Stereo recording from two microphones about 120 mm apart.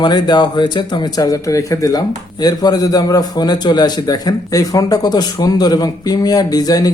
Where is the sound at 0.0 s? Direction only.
35° left (ahead or behind).